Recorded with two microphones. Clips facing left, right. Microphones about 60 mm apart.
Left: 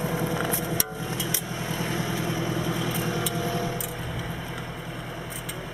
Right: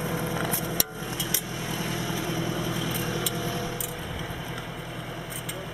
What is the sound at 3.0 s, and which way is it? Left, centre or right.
Vehicle, centre.